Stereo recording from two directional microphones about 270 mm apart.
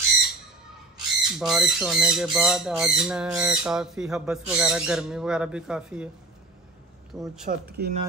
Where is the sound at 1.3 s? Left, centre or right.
Centre.